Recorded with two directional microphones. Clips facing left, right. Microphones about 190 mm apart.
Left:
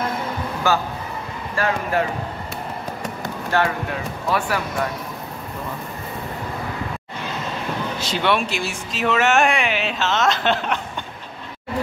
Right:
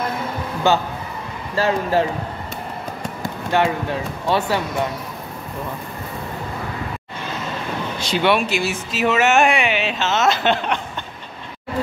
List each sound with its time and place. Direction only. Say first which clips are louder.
1.5 s speech: right 3 dB; 25° right (ahead or behind)
3.5 s speech: right 2 dB; 20° right (ahead or behind)
8.0 s speech: right 4 dB; centre (ahead or behind)